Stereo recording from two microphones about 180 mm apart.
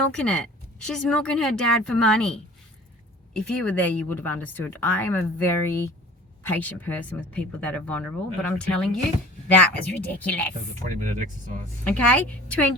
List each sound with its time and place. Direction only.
0.1 s speech: 5° left (ahead or behind)
10.8 s speech: 45° right (ahead or behind)
11.9 s speech: 10° left (ahead or behind)